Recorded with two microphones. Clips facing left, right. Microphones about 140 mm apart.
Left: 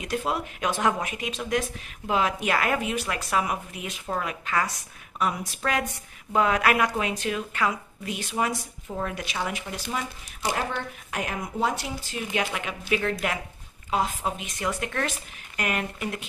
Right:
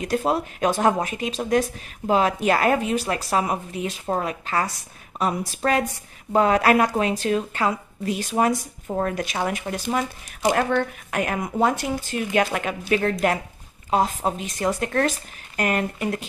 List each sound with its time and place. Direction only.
0.0 s speech: 40° right (ahead or behind)
11.1 s speech: 55° right (ahead or behind); by 16.3 s 40° right (ahead or behind)